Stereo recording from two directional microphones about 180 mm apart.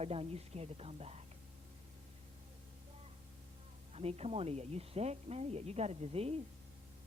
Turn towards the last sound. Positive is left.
turn(degrees=-35)  # may be behind; listen again after turning